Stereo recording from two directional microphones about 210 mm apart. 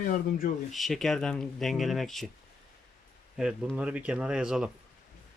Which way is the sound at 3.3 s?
5° right (ahead or behind).